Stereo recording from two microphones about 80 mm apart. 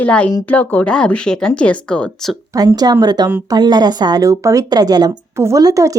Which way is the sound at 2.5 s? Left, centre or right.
Right.